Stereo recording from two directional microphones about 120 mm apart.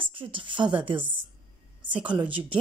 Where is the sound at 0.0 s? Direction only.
45° right (ahead or behind).